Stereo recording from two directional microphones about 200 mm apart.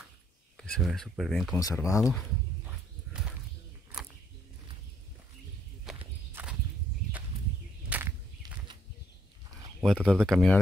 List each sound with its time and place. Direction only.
0.6 s speech: centre (ahead or behind)
1.5 s speech: 15° left (ahead or behind)
2.6 s dog: 5° right (ahead or behind)
5.9 s walk: 5° right (ahead or behind)
7.9 s a sound: 5° right (ahead or behind)
9.8 s speech: centre (ahead or behind)